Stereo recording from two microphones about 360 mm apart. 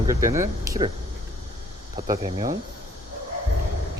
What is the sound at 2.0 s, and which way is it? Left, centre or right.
Speech, centre.